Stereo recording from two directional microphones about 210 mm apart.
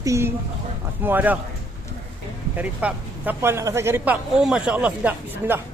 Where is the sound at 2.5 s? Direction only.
5° right (ahead or behind).